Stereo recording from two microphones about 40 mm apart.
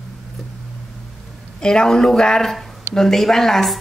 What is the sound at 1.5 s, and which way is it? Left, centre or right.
A woman's voice, centre.